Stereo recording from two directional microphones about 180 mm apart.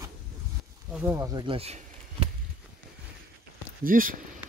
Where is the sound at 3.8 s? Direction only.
50° right (ahead or behind).